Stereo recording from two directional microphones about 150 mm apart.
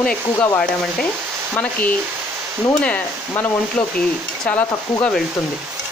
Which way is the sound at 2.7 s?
10° left (ahead or behind).